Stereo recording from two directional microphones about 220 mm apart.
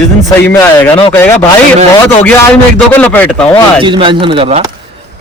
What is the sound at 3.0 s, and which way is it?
Speech, 5° left (ahead or behind).